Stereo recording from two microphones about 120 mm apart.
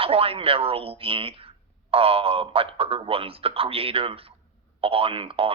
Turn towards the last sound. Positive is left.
turn(degrees=-50)  # may be behind; listen again after turning